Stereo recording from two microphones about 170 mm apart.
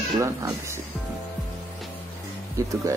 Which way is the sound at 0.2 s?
15° right (ahead or behind).